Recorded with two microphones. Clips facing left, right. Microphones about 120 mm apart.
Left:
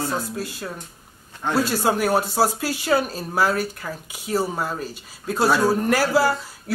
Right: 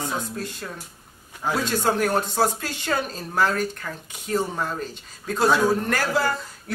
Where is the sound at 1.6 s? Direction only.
10° left (ahead or behind).